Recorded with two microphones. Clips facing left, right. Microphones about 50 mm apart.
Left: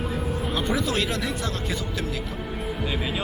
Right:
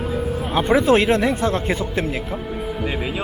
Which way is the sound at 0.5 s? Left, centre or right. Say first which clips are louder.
Right 11 dB; right.